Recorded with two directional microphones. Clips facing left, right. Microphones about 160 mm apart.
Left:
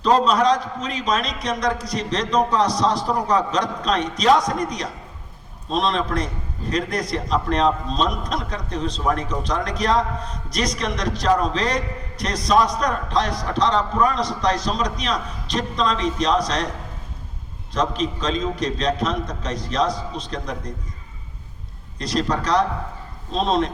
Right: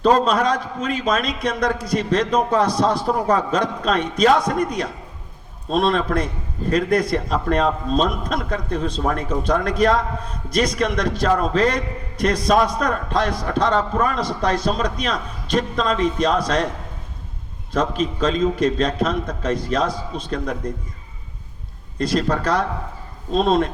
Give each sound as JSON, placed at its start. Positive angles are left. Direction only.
{"t": 0.0, "sound": "a man's voice", "side_deg": -55}
{"t": 17.7, "sound": "a man's voice", "side_deg": -55}
{"t": 21.9, "sound": "a man's voice", "side_deg": -55}